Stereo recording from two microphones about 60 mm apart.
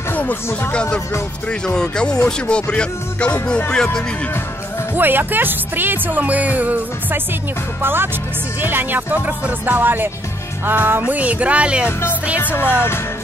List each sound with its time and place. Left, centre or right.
0.1 s music: left
1.5 s speech: centre
4.9 s speech: right
12.7 s music: left